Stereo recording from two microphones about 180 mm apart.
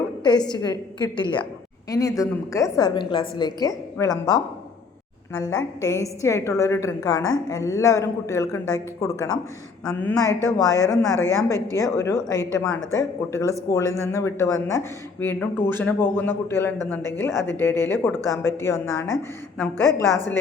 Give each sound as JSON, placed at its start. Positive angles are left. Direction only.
{"t": 0.2, "sound": "a woman's voice", "side_deg": 25}
{"t": 10.8, "sound": "speech", "side_deg": 5}
{"t": 11.3, "sound": "speech", "side_deg": 15}